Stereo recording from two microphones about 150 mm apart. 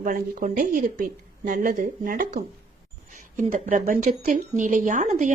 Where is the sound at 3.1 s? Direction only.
50° right (ahead or behind).